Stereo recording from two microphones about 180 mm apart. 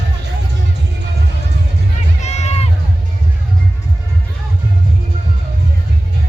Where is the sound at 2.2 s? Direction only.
40° left (ahead or behind).